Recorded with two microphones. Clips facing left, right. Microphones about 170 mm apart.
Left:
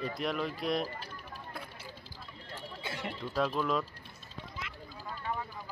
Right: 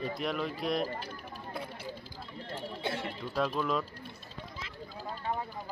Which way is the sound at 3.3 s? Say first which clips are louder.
Even; centre (ahead or behind).